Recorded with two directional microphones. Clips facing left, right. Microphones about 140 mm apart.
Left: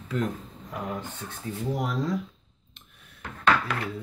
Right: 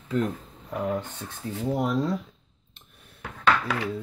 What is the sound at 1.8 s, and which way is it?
Speech, 25° right (ahead or behind).